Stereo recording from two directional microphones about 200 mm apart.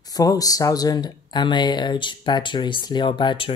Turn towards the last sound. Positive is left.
turn(degrees=25)  # may be behind; listen again after turning